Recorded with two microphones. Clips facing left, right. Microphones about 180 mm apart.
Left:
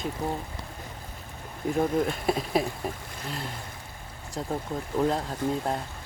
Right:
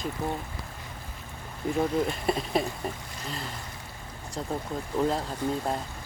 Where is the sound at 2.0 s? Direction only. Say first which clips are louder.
Left 1 dB; centre (ahead or behind).